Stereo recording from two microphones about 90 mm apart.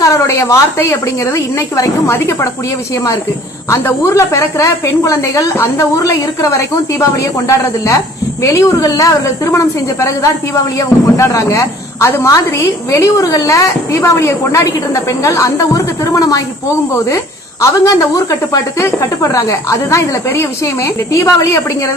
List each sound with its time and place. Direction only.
0.0 s a woman's voice: 35° left (ahead or behind)
3.7 s a woman's voice: 30° left (ahead or behind)
17.6 s a woman's voice: 40° left (ahead or behind)